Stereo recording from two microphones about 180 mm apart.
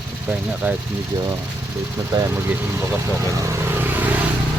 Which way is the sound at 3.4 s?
15° right (ahead or behind).